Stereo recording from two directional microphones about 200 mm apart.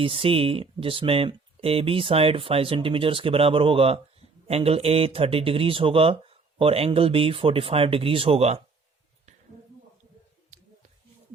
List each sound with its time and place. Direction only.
0.0 s speech: 25° right (ahead or behind)